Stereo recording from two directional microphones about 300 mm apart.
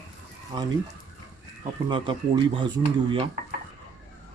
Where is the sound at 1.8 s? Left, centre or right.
Centre.